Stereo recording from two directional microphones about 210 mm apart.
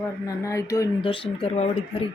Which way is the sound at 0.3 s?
15° left (ahead or behind).